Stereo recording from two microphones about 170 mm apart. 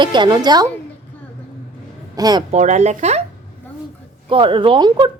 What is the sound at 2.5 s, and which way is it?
Speech, 45° right (ahead or behind).